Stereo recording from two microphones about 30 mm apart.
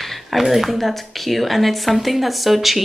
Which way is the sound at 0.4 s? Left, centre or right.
Centre.